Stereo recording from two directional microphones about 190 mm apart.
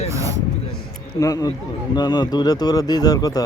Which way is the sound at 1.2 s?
20° left (ahead or behind).